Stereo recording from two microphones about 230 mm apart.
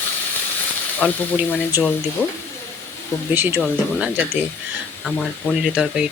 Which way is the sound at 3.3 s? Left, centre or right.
Centre.